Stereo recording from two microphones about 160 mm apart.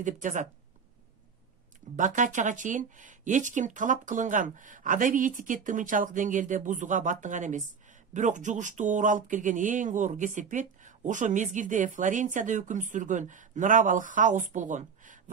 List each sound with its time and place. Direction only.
0.0 s speech: 50° right (ahead or behind)
2.0 s speech: 50° right (ahead or behind)